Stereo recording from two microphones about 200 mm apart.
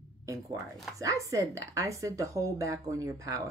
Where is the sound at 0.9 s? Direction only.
15° right (ahead or behind).